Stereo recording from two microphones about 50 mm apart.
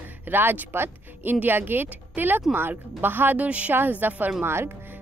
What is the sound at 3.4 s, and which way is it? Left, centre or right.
Speech, right.